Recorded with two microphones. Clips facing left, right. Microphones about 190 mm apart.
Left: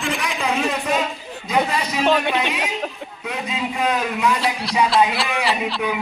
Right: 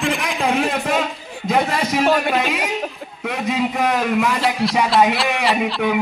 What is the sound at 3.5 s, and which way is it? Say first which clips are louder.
Speech: right 4 dB; 45° right (ahead or behind).